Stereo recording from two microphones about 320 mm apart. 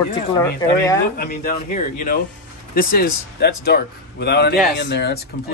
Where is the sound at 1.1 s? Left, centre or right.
Left.